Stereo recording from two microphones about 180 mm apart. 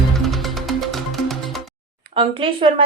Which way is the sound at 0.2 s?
Centre (ahead or behind).